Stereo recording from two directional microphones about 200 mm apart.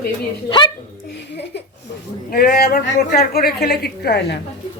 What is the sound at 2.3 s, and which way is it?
A woman's voice, 45° left (ahead or behind).